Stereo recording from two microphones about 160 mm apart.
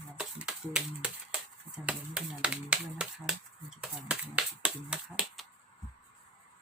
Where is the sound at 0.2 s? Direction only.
5° right (ahead or behind).